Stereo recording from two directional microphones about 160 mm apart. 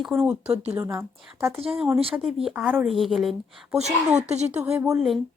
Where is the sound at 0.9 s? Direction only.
15° right (ahead or behind).